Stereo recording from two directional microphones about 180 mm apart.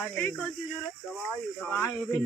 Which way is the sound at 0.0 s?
5° left (ahead or behind).